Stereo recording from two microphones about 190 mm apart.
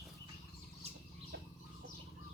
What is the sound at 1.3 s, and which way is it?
Bird, 60° right (ahead or behind).